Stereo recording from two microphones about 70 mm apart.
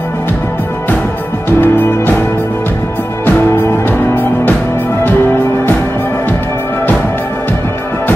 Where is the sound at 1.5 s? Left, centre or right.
Left.